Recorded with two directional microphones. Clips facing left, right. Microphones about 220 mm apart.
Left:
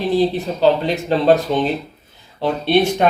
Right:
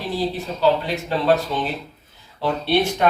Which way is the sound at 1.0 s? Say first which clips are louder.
Left 5 dB; 25° left (ahead or behind).